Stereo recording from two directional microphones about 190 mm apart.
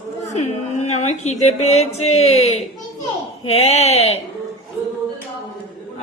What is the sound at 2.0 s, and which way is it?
Speech, 35° left (ahead or behind).